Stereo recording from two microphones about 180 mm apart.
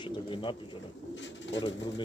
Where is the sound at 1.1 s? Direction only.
90° left.